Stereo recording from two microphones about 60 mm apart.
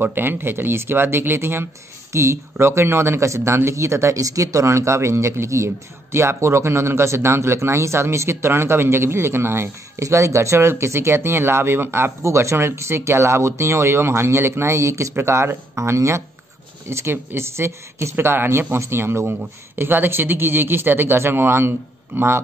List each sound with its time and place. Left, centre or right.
0.0 s speech: right
2.1 s speech: right
10.0 s speech: right
16.9 s speech: right